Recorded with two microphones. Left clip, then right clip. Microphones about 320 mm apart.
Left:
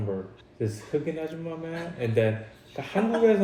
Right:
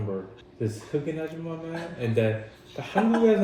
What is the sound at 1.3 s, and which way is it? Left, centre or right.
A man's voice, left.